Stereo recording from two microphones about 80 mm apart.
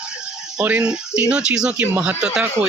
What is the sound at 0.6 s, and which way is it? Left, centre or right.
Speech, centre.